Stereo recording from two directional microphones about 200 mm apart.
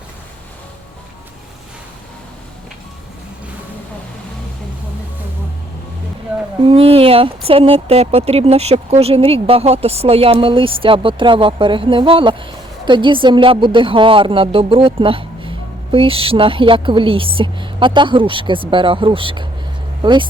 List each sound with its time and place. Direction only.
6.6 s speech: 30° right (ahead or behind)